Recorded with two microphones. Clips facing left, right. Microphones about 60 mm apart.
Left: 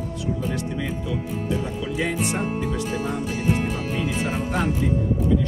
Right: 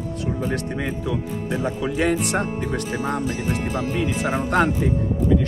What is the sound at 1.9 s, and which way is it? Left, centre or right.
Speech, right.